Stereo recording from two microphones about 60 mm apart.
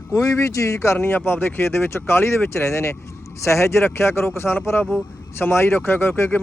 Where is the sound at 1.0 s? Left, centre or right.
Left.